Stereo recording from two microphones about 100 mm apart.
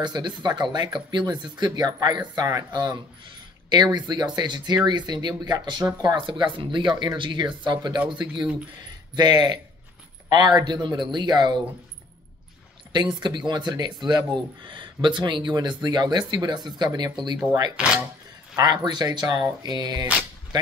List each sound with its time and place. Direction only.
0.0 s speech: 45° right (ahead or behind)
12.9 s speech: 50° right (ahead or behind)
17.7 s speech: 10° right (ahead or behind)
18.6 s speech: 40° right (ahead or behind)